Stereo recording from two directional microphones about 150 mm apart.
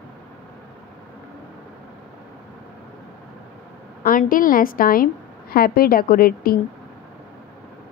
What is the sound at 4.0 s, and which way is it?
Speech, 65° left (ahead or behind).